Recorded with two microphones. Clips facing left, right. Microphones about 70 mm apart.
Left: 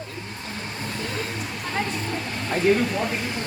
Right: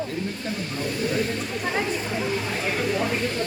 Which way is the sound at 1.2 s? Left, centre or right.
Centre.